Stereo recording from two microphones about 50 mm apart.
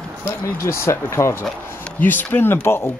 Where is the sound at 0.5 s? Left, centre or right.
Left.